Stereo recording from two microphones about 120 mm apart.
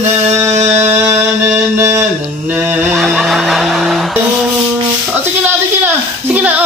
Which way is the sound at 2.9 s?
Centre (ahead or behind).